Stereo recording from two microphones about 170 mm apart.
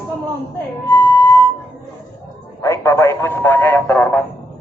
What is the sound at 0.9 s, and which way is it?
Music, 25° left (ahead or behind).